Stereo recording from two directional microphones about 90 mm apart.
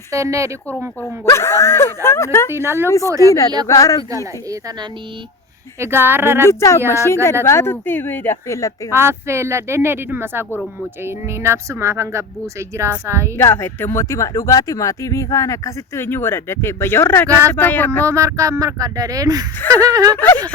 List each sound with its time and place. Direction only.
0.1 s a woman's voice: 35° right (ahead or behind)
1.0 s speech: 30° left (ahead or behind)
2.5 s speech: 30° right (ahead or behind)
3.7 s speech: 40° left (ahead or behind)
5.8 s speech: 25° right (ahead or behind)
6.4 s speech: 30° left (ahead or behind)
8.4 s speech: 35° left (ahead or behind)
8.9 s a woman's voice: 30° right (ahead or behind)
13.3 s speech: 25° left (ahead or behind)
16.0 s speech: 25° left (ahead or behind)
18.0 s a woman's voice: 35° right (ahead or behind)
19.7 s a sound: 45° right (ahead or behind)
20.1 s speech: 20° left (ahead or behind)